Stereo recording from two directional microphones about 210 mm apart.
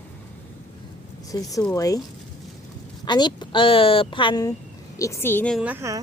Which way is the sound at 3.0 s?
20° left (ahead or behind).